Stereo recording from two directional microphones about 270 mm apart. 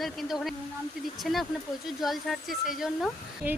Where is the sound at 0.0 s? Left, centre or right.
Centre.